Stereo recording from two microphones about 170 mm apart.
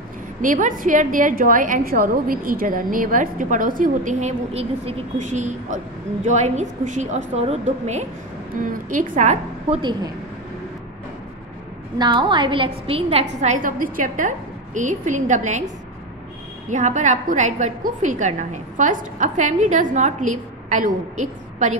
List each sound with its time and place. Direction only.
0.4 s a woman's voice: 50° right (ahead or behind)
12.0 s a woman's voice: 25° right (ahead or behind); by 15.6 s 45° right (ahead or behind)
16.6 s a woman's voice: 45° right (ahead or behind)